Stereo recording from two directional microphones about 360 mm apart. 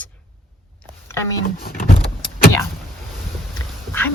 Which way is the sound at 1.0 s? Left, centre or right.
Centre.